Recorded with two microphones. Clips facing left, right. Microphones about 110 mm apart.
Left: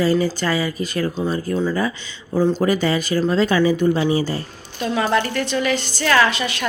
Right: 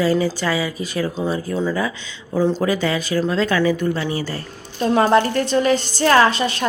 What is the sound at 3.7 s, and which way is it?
Speech, 20° left (ahead or behind).